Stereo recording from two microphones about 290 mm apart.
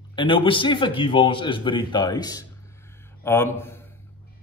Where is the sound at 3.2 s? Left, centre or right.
Centre.